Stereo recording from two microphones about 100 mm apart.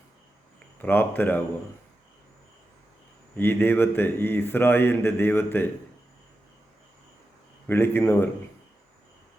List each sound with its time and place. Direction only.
0.8 s a man's voice: 20° left (ahead or behind)
3.3 s a man's voice: 20° left (ahead or behind)
7.7 s a man's voice: 25° left (ahead or behind)